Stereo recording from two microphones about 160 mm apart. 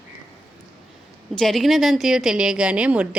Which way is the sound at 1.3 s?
Centre (ahead or behind).